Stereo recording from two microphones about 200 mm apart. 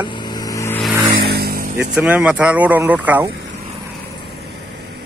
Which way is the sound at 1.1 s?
55° right (ahead or behind).